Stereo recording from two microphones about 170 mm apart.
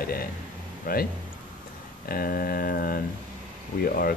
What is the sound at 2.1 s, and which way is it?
Speech, 60° left (ahead or behind).